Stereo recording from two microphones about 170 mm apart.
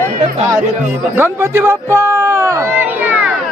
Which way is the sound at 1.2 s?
15° right (ahead or behind).